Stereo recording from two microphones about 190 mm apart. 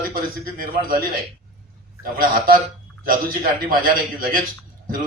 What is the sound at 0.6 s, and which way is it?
Speech, 50° right (ahead or behind).